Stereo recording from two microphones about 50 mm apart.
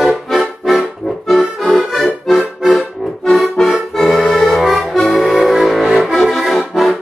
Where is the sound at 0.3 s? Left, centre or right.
Centre.